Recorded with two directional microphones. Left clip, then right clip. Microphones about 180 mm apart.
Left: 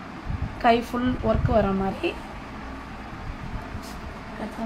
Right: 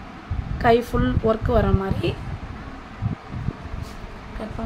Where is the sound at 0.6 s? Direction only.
20° right (ahead or behind).